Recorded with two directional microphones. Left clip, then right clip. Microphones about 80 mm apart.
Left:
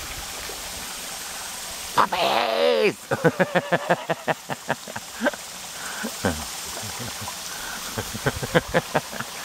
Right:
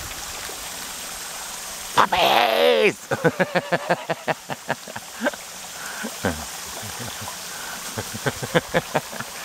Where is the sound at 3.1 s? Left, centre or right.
Centre.